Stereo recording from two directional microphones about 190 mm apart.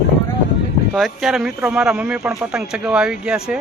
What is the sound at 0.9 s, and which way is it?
Speech, centre (ahead or behind).